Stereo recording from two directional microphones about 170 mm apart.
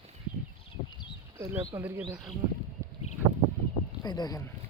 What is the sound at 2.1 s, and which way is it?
Speech, centre (ahead or behind).